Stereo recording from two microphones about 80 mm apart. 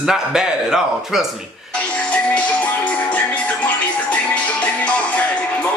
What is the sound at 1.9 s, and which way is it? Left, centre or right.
Music, centre.